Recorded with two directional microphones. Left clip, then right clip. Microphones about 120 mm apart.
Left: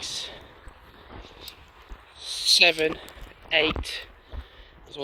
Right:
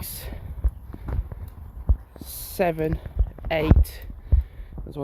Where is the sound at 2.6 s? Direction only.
15° left (ahead or behind).